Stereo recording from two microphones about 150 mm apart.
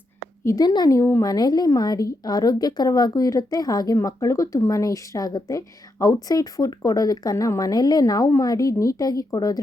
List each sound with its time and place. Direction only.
0.4 s a woman's voice: 25° left (ahead or behind)